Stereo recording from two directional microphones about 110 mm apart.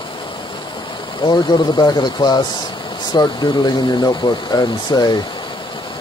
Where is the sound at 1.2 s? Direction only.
40° left (ahead or behind).